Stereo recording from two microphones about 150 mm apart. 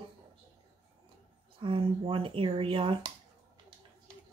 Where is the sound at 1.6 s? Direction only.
35° right (ahead or behind).